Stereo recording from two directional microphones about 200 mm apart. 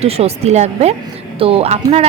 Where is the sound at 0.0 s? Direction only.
30° right (ahead or behind).